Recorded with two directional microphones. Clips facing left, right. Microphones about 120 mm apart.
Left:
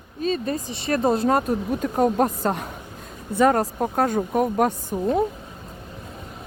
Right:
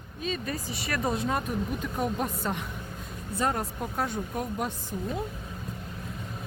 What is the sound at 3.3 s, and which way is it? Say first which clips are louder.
Speech: left 11 dB; 70° left (ahead or behind).